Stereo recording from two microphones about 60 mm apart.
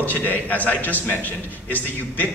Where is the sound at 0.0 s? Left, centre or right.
Left.